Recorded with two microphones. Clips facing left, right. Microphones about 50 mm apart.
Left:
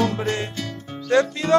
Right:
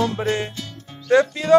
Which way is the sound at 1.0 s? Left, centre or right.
Centre.